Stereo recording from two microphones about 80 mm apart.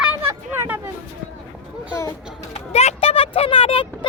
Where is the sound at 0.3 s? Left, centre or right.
Right.